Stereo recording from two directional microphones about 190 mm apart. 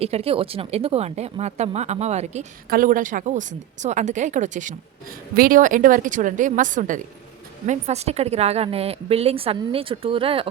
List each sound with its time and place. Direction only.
0.0 s a woman's voice: 30° right (ahead or behind)
2.6 s a woman's voice: 50° right (ahead or behind); by 10.5 s 30° right (ahead or behind)